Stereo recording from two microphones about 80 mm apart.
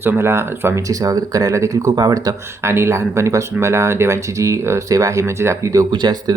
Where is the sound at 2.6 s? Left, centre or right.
Right.